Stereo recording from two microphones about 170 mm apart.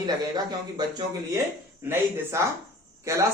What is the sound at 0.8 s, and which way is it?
Speech, 25° right (ahead or behind).